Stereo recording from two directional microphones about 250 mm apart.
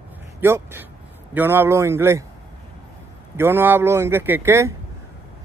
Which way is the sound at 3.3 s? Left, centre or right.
Centre.